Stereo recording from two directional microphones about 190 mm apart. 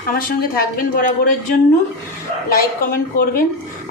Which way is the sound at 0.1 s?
50° left (ahead or behind).